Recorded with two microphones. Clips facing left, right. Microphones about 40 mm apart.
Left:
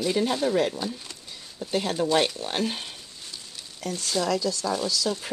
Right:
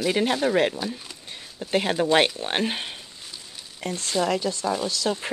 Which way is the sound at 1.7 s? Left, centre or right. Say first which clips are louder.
Right 3 dB; right.